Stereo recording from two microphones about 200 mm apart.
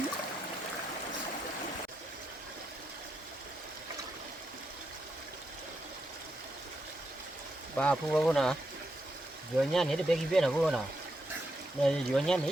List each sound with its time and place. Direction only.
7.8 s speech: 5° left (ahead or behind)
9.6 s speech: centre (ahead or behind)
11.8 s speech: 5° left (ahead or behind)